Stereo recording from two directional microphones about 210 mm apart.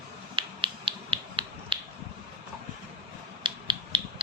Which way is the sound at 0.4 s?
25° right (ahead or behind).